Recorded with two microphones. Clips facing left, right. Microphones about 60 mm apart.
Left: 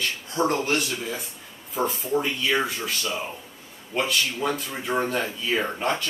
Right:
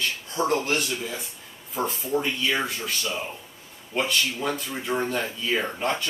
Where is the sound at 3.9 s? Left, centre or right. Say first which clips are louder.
Even; centre.